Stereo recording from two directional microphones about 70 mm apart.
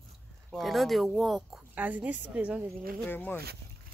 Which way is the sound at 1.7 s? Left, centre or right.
Right.